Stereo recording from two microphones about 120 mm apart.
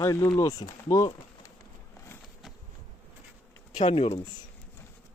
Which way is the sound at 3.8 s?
60° left (ahead or behind).